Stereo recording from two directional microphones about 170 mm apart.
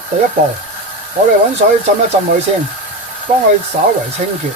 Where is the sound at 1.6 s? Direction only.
50° right (ahead or behind).